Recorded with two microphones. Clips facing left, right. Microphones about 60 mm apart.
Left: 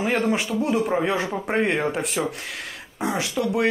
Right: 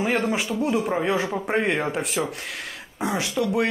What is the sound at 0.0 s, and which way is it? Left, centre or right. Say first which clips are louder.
Speech: left 1 dB; centre.